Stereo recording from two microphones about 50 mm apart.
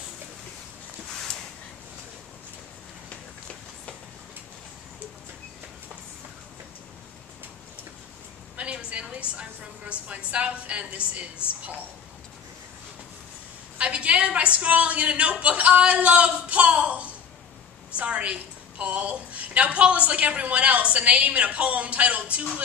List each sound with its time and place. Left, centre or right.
8.5 s a woman's voice: right
13.7 s a woman's voice: right